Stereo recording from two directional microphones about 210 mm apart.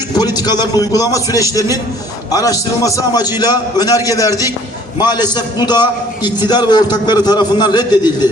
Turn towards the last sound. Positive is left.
turn(degrees=20)  # may be behind; listen again after turning